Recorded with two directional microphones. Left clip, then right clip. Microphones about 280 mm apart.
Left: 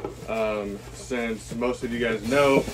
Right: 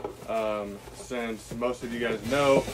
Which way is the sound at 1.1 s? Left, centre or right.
Centre.